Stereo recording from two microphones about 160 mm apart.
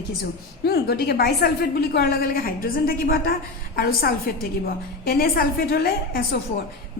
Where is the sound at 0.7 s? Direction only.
80° left.